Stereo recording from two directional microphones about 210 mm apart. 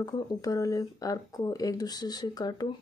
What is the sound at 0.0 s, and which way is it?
Speech, 15° left (ahead or behind).